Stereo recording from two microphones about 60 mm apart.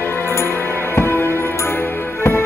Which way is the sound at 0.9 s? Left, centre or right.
Left.